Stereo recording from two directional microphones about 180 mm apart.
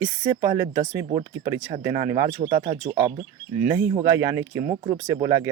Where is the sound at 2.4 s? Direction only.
20° right (ahead or behind).